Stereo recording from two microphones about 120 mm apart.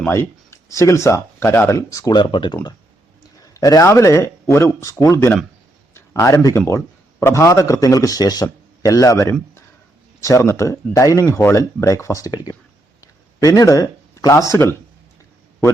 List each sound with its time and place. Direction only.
0.1 s speech: 20° left (ahead or behind); by 2.6 s 45° left (ahead or behind)
3.5 s a man's voice: 30° left (ahead or behind)